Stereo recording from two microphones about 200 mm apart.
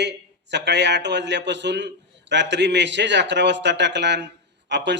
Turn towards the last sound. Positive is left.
turn(degrees=-60)  # may be behind; listen again after turning